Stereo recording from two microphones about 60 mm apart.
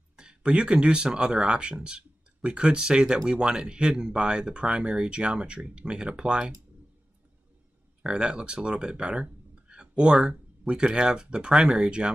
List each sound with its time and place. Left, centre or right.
0.1 s speech: centre
8.0 s speech: centre